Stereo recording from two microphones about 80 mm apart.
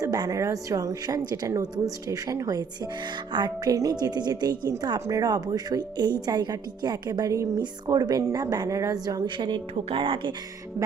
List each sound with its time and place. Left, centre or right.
0.0 s a woman's voice: right
4.9 s speech: right
5.3 s a woman's voice: right
7.6 s a woman's voice: right
9.2 s speech: right